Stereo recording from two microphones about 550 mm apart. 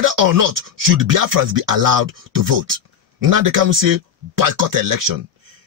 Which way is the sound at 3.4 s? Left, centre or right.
Right.